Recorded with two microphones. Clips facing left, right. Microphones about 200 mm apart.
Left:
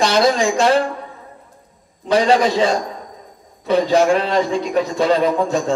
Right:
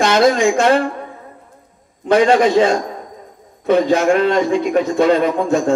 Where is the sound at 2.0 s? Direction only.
55° right (ahead or behind).